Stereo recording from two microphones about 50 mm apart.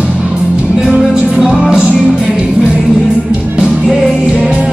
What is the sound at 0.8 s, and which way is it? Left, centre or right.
Music, right.